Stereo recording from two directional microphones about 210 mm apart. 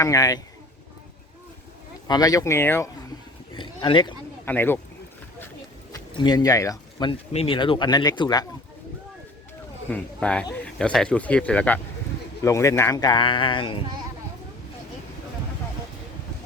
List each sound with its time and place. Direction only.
0.0 s speech: 15° left (ahead or behind)
2.0 s speech: 20° left (ahead or behind)
3.5 s a sound: 20° left (ahead or behind)
4.4 s speech: 10° left (ahead or behind)
5.9 s speech: 20° left (ahead or behind)
9.9 s speech: 5° left (ahead or behind); by 13.7 s 25° left (ahead or behind)